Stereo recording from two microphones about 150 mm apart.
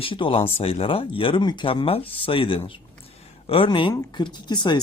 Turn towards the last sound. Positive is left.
turn(degrees=30)  # may be behind; listen again after turning